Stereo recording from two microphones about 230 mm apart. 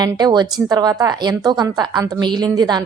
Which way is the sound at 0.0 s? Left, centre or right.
Centre.